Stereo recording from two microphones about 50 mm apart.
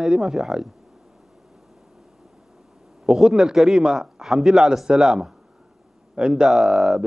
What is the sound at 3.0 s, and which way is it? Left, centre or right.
A man's voice, centre.